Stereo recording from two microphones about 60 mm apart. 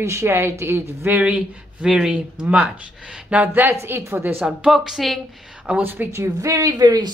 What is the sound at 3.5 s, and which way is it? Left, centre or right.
Speech, right.